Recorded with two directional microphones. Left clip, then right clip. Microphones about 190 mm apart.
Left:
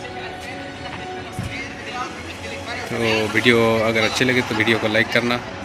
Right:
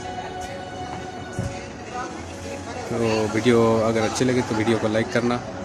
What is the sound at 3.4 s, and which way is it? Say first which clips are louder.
Speech: left 2 dB; 20° right (ahead or behind).